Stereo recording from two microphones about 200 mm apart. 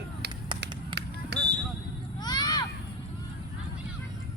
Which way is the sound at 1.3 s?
55° right (ahead or behind).